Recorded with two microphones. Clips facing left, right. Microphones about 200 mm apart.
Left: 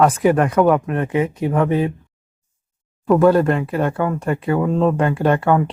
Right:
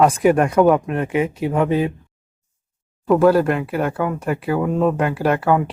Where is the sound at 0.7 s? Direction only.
20° right (ahead or behind).